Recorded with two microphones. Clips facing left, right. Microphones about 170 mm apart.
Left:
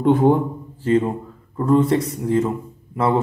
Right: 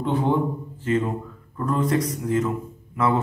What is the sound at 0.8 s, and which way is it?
Speech, 30° left (ahead or behind).